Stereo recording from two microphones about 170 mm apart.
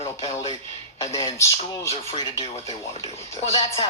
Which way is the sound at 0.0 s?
30° left (ahead or behind).